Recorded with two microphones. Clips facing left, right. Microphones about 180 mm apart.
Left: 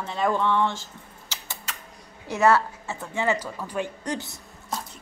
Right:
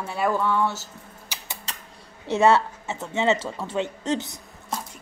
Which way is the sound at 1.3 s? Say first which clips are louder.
Even; 15° right (ahead or behind).